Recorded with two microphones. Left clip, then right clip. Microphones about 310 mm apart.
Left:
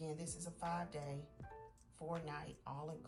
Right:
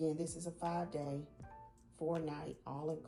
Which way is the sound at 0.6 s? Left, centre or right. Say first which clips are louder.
Right 4 dB; left.